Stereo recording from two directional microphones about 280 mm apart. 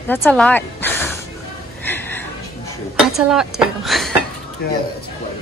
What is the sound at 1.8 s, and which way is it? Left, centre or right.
Chuckle, centre.